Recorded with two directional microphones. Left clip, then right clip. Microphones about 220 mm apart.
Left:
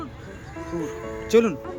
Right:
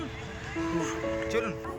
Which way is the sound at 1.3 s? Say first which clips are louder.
Left 15 dB; 45° left (ahead or behind).